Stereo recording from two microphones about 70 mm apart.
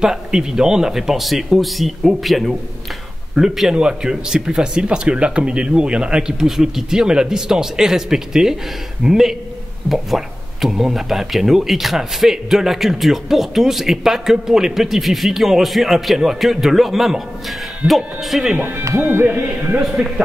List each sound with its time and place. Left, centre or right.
0.0 s speech: centre
18.6 s speech: right
19.8 s speech: centre